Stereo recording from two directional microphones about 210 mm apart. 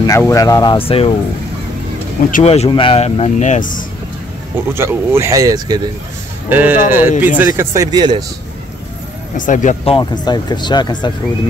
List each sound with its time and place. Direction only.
0.0 s speech: 15° left (ahead or behind)
2.3 s speech: 30° left (ahead or behind)
4.7 s speech: 10° right (ahead or behind)
9.4 s speech: 35° left (ahead or behind)
9.9 s speech: 20° left (ahead or behind)